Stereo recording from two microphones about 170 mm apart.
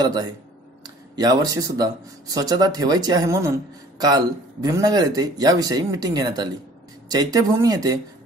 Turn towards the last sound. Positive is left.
turn(degrees=-20)  # may be behind; listen again after turning